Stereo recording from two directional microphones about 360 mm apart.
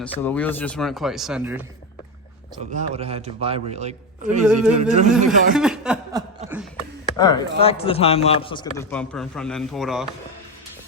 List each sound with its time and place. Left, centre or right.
0.0 s speech: centre
2.7 s a man's voice: centre
5.1 s speech: centre
7.2 s a man's voice: centre